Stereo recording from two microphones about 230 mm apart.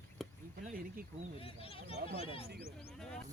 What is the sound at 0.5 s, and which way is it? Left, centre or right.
Speech, right.